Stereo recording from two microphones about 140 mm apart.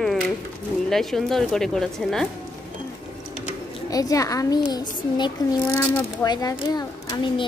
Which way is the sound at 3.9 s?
25° left (ahead or behind).